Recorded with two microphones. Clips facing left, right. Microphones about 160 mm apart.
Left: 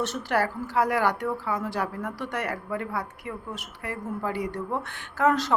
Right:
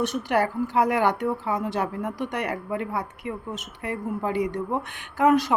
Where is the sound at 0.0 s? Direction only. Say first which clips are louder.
Right 3 dB; 15° right (ahead or behind).